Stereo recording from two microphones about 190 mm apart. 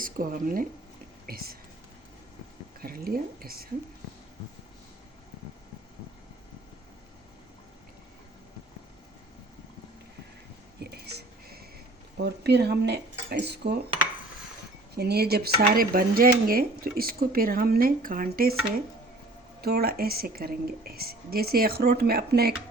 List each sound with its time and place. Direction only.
0.0 s speech: 45° right (ahead or behind)
2.8 s speech: 50° right (ahead or behind)
10.8 s whispering: 60° right (ahead or behind)
12.1 s speech: 60° right (ahead or behind)
14.9 s speech: 55° right (ahead or behind)